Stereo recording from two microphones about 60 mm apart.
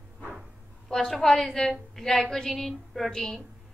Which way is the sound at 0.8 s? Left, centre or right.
Centre.